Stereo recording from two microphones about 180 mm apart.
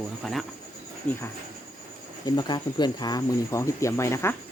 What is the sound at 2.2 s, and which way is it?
Speech, 25° left (ahead or behind).